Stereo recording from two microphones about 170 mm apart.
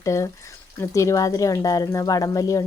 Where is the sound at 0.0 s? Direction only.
15° left (ahead or behind).